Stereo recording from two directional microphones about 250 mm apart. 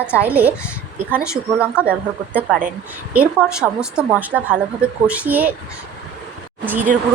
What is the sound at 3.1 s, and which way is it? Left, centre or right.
A woman's voice, centre.